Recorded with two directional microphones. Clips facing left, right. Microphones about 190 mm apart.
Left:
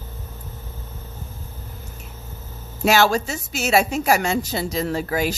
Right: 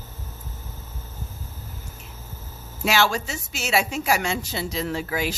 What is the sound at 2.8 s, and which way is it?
A woman's voice, 45° left (ahead or behind).